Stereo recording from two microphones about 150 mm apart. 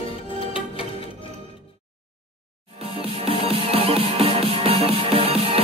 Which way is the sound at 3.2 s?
40° right (ahead or behind).